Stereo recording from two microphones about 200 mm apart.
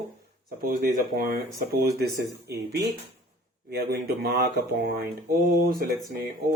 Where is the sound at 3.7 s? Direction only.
50° right (ahead or behind).